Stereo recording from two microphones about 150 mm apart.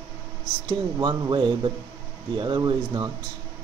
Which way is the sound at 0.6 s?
30° right (ahead or behind).